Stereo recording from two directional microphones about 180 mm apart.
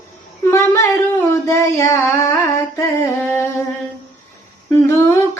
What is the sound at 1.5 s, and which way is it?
Female singing, 15° left (ahead or behind).